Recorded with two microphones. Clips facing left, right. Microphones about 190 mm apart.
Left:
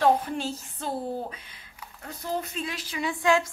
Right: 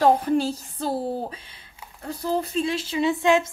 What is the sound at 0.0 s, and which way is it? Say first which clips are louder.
Speech: right 4 dB; 35° right (ahead or behind).